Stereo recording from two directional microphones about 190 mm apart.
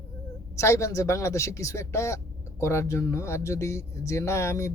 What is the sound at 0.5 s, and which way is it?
Speech, 15° left (ahead or behind).